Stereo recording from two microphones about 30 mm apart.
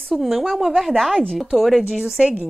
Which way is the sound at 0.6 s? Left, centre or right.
Centre.